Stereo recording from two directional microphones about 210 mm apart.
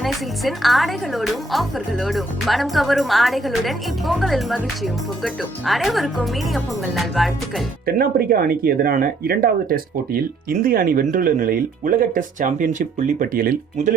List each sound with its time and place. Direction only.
0.0 s a woman's voice: centre (ahead or behind)
7.9 s speech: 45° right (ahead or behind)